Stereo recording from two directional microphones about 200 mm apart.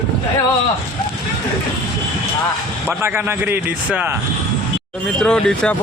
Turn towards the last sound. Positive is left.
turn(degrees=5)  # may be behind; listen again after turning